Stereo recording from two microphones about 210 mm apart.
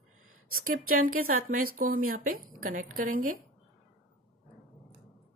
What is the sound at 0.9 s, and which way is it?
A woman's voice, 45° right (ahead or behind).